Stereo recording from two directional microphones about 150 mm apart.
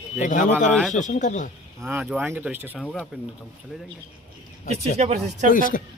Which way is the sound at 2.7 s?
5° left (ahead or behind).